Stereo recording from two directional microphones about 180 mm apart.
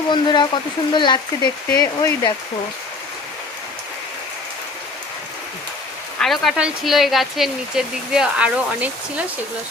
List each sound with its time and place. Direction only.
0.1 s speech: 25° left (ahead or behind)
6.1 s speech: centre (ahead or behind)